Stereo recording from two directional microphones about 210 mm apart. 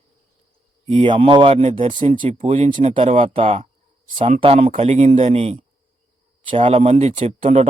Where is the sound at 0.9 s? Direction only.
25° right (ahead or behind).